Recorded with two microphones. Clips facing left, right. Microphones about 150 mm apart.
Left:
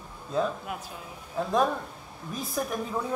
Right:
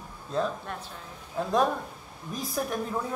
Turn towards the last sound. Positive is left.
turn(degrees=0)  # may be behind; listen again after turning